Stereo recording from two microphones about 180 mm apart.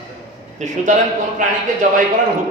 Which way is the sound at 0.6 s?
40° right (ahead or behind).